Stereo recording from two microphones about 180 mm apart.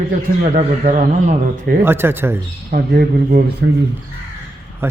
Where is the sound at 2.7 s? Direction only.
55° right (ahead or behind).